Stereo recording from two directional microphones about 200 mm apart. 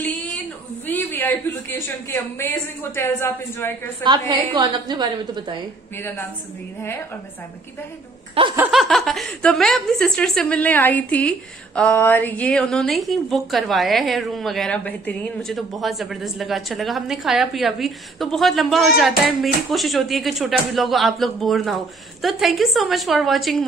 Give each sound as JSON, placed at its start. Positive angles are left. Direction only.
{"t": 0.0, "sound": "a sound", "side_deg": 5}
{"t": 0.8, "sound": "a woman's voice", "side_deg": 10}
{"t": 4.0, "sound": "a woman's voice", "side_deg": -20}
{"t": 5.9, "sound": "a woman's voice", "side_deg": 10}
{"t": 8.4, "sound": "a woman's voice", "side_deg": -30}
{"t": 8.7, "sound": "speech", "side_deg": 0}